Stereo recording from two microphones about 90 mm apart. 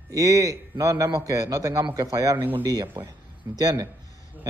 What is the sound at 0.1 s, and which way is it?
Speech, 40° right (ahead or behind).